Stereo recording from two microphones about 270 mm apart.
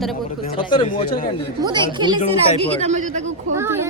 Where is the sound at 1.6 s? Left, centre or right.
Centre.